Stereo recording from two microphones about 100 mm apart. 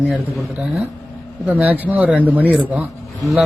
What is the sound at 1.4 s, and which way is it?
Speech, 15° right (ahead or behind).